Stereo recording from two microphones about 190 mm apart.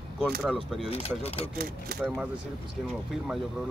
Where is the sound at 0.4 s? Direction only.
Centre (ahead or behind).